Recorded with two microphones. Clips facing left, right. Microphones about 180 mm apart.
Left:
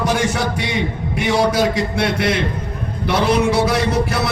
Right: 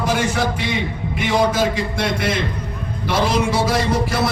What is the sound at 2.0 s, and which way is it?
A man's voice, 65° left (ahead or behind).